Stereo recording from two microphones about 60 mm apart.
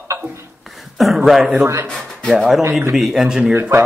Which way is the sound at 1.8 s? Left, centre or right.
Centre.